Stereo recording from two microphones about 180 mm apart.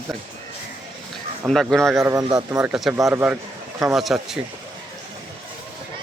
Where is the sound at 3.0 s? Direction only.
20° right (ahead or behind).